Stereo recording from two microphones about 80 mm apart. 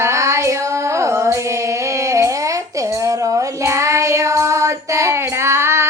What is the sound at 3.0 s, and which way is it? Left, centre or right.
Child singing, right.